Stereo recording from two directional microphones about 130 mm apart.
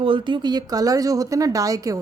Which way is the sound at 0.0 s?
40° right (ahead or behind).